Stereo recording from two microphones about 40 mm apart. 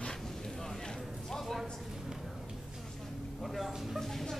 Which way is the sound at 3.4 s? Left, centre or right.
Centre.